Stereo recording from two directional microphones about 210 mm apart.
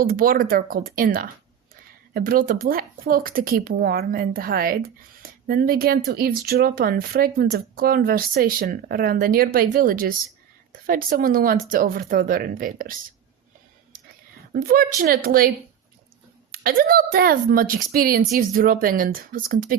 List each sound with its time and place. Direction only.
0.0 s speech: 45° right (ahead or behind)
14.5 s speech: 45° right (ahead or behind)